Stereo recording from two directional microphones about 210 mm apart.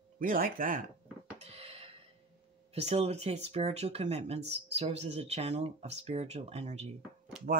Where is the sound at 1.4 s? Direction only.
30° right (ahead or behind).